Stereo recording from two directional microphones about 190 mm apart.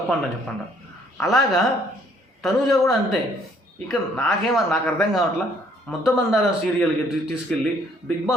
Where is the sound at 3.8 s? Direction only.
5° left (ahead or behind).